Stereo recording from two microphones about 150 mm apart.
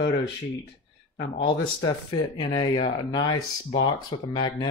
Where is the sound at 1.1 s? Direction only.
30° left (ahead or behind).